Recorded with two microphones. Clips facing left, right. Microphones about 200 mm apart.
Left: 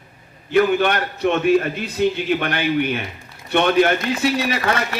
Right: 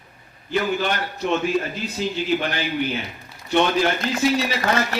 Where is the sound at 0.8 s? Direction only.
65° left (ahead or behind).